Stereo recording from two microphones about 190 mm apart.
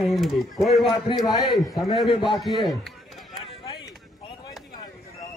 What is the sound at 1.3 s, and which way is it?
Speech, 20° left (ahead or behind).